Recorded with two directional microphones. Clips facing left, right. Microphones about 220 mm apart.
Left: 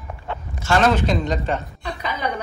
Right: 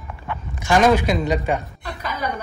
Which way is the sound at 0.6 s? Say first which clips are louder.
Right 2 dB; 15° right (ahead or behind).